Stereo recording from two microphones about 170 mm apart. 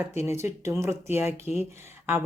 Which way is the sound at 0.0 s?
15° right (ahead or behind).